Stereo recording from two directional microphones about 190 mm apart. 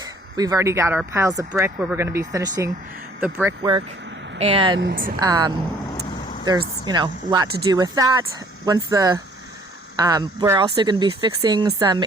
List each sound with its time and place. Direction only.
0.0 s speech: 20° right (ahead or behind)
3.6 s speech: 20° right (ahead or behind)
4.8 s a woman's voice: 50° right (ahead or behind)
5.2 s speech: 20° right (ahead or behind)
6.1 s vehicle: 45° left (ahead or behind)
6.4 s speech: 20° right (ahead or behind)